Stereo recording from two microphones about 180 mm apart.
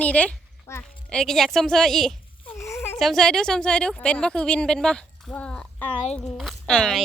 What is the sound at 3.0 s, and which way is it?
A woman's voice, centre (ahead or behind).